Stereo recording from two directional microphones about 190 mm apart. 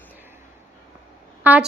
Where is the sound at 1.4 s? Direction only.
10° right (ahead or behind).